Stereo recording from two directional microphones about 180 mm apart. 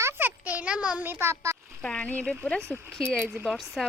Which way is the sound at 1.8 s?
5° left (ahead or behind).